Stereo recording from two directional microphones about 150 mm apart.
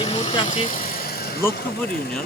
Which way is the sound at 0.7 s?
70° left (ahead or behind).